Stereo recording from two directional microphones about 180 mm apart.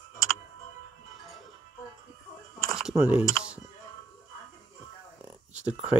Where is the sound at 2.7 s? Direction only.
Centre (ahead or behind).